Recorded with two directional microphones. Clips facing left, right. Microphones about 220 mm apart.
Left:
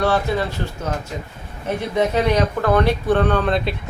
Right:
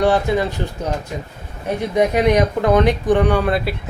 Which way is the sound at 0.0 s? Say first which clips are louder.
Right 3 dB; 15° right (ahead or behind).